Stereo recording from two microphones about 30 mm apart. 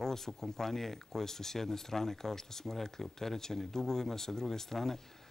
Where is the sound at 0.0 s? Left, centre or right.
Centre.